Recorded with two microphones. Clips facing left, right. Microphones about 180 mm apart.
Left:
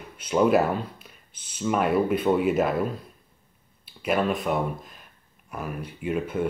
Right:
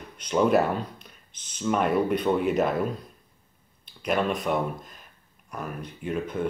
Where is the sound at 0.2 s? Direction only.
5° left (ahead or behind).